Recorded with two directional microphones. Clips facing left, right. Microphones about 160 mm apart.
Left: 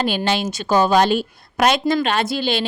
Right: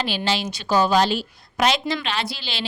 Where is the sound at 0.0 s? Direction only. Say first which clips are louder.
Left 4 dB; 50° left (ahead or behind).